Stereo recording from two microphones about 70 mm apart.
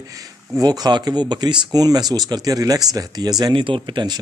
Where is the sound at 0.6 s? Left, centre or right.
Right.